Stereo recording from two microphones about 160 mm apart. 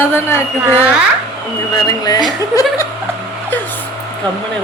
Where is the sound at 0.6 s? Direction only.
10° right (ahead or behind).